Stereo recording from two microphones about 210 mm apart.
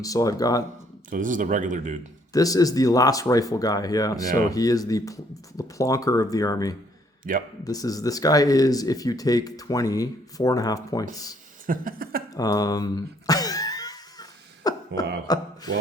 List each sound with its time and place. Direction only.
0.0 s speech: 15° left (ahead or behind)
1.1 s speech: 40° right (ahead or behind)
2.3 s speech: 15° left (ahead or behind)
7.3 s speech: 40° right (ahead or behind)
7.6 s speech: 15° left (ahead or behind)
11.6 s speech: 40° right (ahead or behind)
12.3 s a sound: 15° left (ahead or behind)
15.3 s speech: 20° left (ahead or behind)